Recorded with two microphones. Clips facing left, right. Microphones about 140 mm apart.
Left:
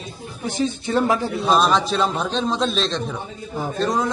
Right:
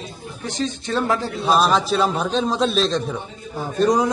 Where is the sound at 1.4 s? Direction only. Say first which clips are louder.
Right 1 dB; 5° right (ahead or behind).